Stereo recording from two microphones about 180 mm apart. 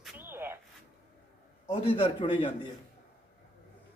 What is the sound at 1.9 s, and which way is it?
Speech, 30° left (ahead or behind).